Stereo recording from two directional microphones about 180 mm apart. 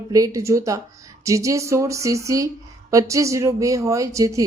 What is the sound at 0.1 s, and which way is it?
Speech, 20° right (ahead or behind).